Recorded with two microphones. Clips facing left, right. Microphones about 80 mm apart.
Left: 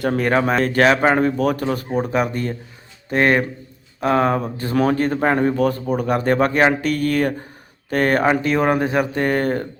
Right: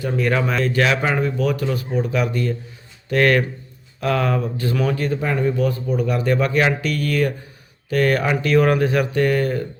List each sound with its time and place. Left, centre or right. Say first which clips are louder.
0.2 s a man's voice: left 1 dB; left
3.1 s a man's voice: even; left